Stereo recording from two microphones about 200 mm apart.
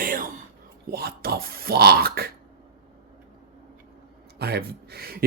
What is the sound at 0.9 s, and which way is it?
A man's voice, 50° right (ahead or behind).